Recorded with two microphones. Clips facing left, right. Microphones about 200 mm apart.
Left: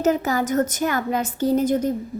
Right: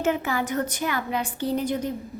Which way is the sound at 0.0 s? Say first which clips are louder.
Left 4 dB; 40° left (ahead or behind).